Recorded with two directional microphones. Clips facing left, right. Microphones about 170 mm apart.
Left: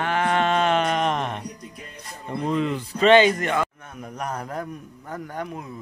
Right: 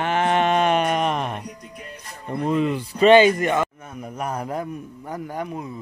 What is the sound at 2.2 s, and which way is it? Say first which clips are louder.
A man's voice: right 2 dB; 15° right (ahead or behind).